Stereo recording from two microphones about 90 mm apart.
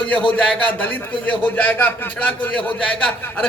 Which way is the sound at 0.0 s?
15° left (ahead or behind).